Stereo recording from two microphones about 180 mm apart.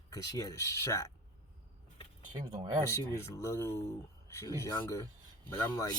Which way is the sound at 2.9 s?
15° left (ahead or behind).